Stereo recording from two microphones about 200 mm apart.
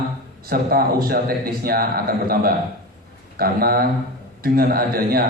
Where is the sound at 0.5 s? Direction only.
50° right (ahead or behind).